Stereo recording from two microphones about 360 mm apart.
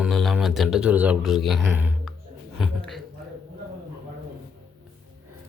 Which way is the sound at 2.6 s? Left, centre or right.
Centre.